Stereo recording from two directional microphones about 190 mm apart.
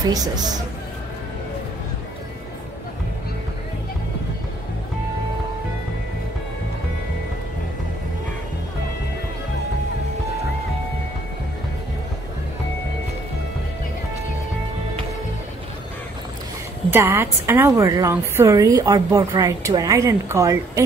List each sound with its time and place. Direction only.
0.1 s speech: 20° right (ahead or behind)
16.9 s a woman's voice: 15° right (ahead or behind)